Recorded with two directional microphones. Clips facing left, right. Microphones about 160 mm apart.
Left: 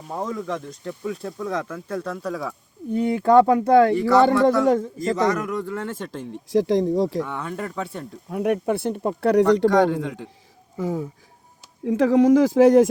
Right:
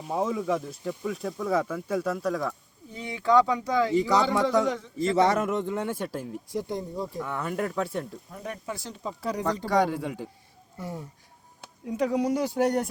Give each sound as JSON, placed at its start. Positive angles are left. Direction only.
{"t": 0.1, "sound": "speech", "side_deg": -5}
{"t": 2.9, "sound": "speech", "side_deg": 50}
{"t": 4.6, "sound": "speech", "side_deg": 45}
{"t": 5.1, "sound": "speech", "side_deg": -30}
{"t": 6.5, "sound": "speech", "side_deg": 90}
{"t": 7.2, "sound": "speech", "side_deg": -5}
{"t": 8.3, "sound": "speech", "side_deg": 70}
{"t": 9.9, "sound": "a man's voice", "side_deg": -10}
{"t": 10.8, "sound": "speech", "side_deg": 90}